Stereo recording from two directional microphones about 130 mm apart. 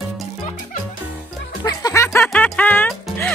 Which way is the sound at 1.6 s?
25° left (ahead or behind).